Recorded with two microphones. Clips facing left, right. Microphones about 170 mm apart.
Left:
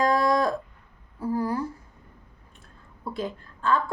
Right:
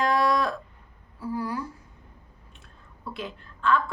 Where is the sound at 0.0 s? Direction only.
40° left (ahead or behind).